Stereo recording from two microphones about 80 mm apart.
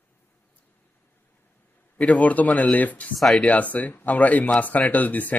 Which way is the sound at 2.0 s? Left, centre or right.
Centre.